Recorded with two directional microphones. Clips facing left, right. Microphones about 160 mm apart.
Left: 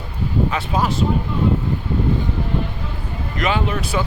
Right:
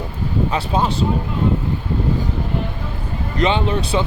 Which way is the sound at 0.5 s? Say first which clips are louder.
Right 1 dB; 30° right (ahead or behind).